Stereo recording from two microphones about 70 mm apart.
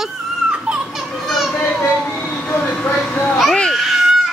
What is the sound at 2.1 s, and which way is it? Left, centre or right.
Vehicle, centre.